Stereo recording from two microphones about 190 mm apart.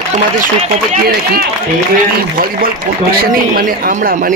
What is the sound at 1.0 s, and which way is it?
Speech, 55° right (ahead or behind).